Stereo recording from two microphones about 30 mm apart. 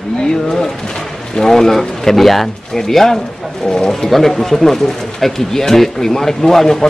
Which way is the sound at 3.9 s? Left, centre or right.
Centre.